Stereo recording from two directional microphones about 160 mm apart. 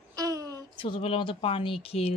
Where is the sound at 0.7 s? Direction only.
35° left (ahead or behind).